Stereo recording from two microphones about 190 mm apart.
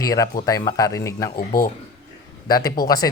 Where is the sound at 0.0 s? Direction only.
20° left (ahead or behind).